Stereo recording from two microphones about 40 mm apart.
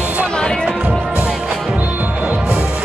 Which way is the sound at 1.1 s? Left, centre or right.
Right.